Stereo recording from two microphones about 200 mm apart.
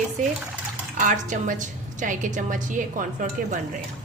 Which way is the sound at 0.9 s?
40° right (ahead or behind).